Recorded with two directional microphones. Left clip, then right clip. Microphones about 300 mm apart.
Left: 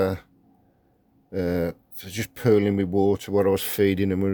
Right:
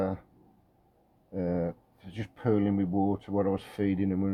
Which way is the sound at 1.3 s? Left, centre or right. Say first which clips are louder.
Left 6 dB; left.